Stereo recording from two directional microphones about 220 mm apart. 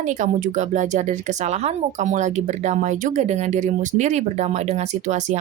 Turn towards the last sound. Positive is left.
turn(degrees=-35)  # may be behind; listen again after turning